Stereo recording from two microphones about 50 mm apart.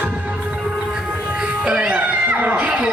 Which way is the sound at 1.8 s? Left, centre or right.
Right.